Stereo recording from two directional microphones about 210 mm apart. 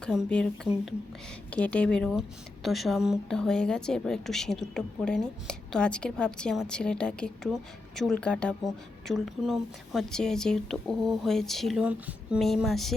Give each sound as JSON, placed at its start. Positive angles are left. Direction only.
{"t": 0.0, "sound": "a woman's voice", "side_deg": 0}